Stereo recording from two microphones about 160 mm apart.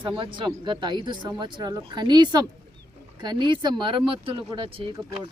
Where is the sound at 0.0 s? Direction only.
30° right (ahead or behind).